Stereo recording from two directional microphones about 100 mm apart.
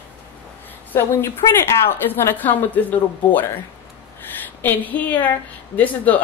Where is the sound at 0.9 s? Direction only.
25° left (ahead or behind).